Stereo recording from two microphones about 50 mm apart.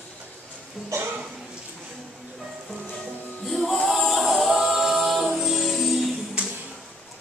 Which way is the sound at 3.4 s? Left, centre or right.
Centre.